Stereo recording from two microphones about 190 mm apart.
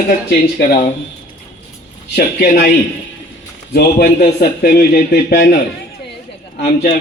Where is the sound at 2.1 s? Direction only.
55° left (ahead or behind).